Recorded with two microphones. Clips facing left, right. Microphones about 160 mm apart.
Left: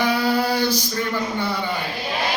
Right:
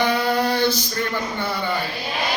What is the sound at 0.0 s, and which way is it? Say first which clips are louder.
Female singing: even; 5° left (ahead or behind).